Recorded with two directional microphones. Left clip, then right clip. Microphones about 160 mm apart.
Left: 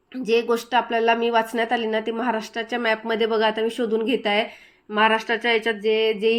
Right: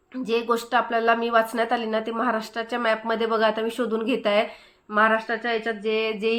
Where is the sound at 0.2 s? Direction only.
10° left (ahead or behind).